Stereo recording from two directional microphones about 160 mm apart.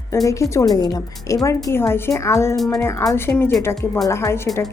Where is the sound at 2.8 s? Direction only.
15° left (ahead or behind).